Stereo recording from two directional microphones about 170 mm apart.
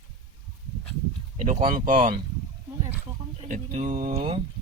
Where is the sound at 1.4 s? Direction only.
45° right (ahead or behind).